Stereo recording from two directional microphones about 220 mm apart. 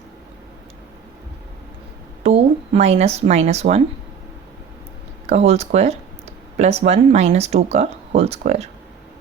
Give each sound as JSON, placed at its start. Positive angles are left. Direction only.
{"t": 2.2, "sound": "speech", "side_deg": -30}
{"t": 5.2, "sound": "speech", "side_deg": -30}